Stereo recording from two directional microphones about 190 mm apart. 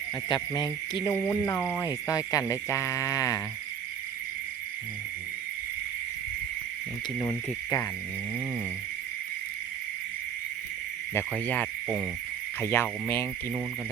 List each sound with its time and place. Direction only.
0.3 s cricket: 20° left (ahead or behind)
1.1 s speech: 15° left (ahead or behind)
7.2 s speech: 20° left (ahead or behind)
11.1 s speech: 10° left (ahead or behind)